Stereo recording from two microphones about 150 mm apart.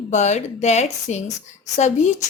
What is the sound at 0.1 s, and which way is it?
Speech, 50° left (ahead or behind).